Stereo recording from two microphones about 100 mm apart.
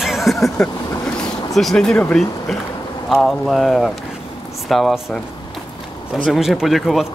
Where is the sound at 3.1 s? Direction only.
Centre (ahead or behind).